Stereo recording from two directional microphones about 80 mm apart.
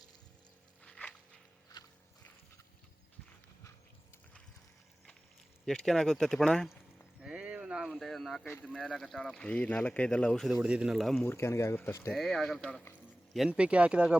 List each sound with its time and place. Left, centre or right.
0.9 s a sound: centre
1.7 s walk: left
5.6 s speech: centre
7.2 s clip-clop: centre
7.9 s a sound: centre
8.6 s speech: centre
10.4 s speech: centre
11.3 s speech: left
12.1 s speech: centre
13.5 s speech: centre